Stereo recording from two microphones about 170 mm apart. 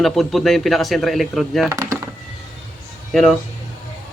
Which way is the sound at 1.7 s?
15° right (ahead or behind).